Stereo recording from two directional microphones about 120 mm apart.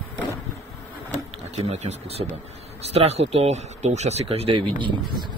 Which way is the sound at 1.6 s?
70° right (ahead or behind).